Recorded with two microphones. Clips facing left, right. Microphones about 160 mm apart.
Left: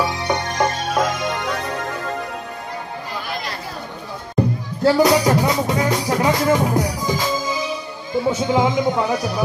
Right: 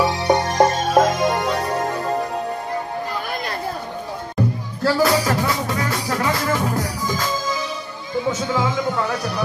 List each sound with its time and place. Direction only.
0.0 s music: 35° right (ahead or behind)
4.8 s music: 20° left (ahead or behind)
8.3 s speech: 20° left (ahead or behind)